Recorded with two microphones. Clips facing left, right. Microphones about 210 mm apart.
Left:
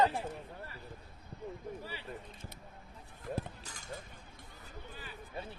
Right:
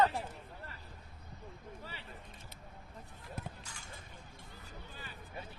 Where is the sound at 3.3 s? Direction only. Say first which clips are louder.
Left 5 dB; 40° left (ahead or behind).